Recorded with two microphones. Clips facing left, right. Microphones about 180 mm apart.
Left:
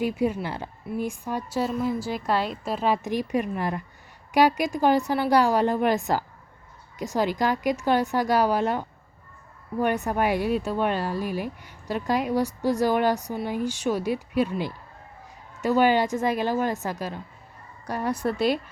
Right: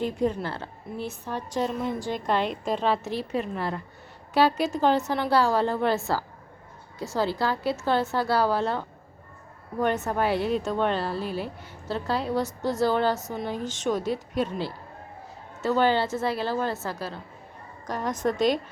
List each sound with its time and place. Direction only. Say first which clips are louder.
0.0 s speech: left 1 dB; 10° left (ahead or behind)